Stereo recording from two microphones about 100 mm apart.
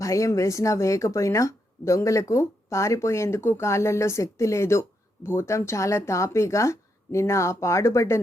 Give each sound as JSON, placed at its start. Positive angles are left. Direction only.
{"t": 0.0, "sound": "speech", "side_deg": 30}